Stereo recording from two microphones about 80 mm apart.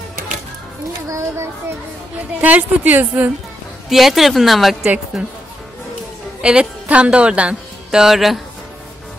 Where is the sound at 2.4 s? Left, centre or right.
Right.